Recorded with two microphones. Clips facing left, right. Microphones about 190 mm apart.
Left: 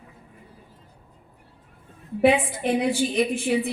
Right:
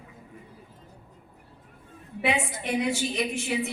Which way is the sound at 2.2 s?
30° left (ahead or behind).